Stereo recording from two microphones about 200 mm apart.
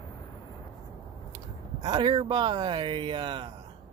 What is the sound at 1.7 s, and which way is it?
Speech, 20° right (ahead or behind).